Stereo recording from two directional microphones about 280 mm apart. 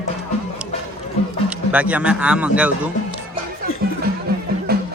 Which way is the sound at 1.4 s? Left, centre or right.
Centre.